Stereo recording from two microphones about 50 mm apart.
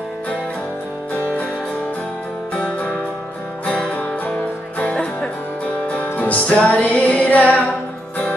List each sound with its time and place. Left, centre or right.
3.6 s music: left
6.1 s music: left
6.5 s music: centre
6.8 s music: left